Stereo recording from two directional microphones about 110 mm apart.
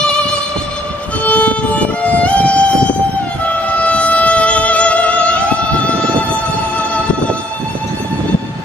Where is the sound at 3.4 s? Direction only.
15° left (ahead or behind).